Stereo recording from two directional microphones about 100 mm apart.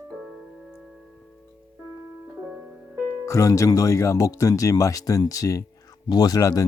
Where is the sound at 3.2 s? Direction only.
30° left (ahead or behind).